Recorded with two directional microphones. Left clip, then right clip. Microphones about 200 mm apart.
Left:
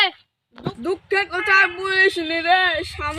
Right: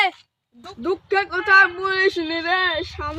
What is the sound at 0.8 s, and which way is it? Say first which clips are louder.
Speech: right 1 dB; 5° right (ahead or behind).